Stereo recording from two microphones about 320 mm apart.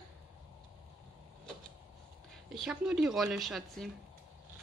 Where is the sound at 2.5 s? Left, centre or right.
Centre.